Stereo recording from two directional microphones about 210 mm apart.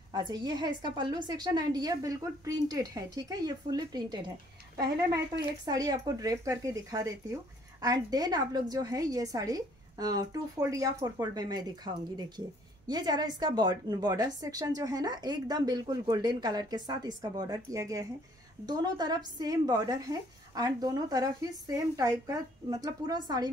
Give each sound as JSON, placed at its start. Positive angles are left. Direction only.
{"t": 0.1, "sound": "a woman's voice", "side_deg": -20}
{"t": 5.7, "sound": "a woman's voice", "side_deg": -20}